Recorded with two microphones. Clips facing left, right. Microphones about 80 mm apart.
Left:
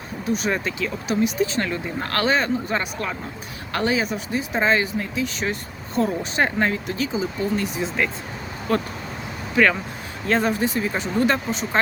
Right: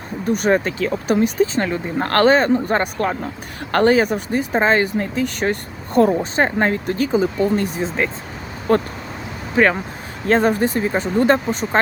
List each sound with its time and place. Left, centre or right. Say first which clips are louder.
0.3 s speech: right 6 dB; right
2.0 s speech: right 8 dB; right
6.3 s speech: right 4 dB; right